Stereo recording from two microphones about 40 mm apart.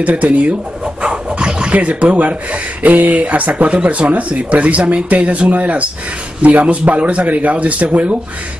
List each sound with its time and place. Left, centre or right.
0.0 s speech: right
1.0 s speech: right